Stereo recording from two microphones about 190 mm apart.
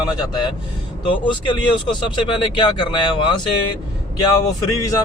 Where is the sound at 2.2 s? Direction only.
25° left (ahead or behind).